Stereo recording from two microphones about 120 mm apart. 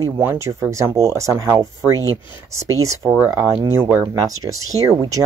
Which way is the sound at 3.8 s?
15° right (ahead or behind).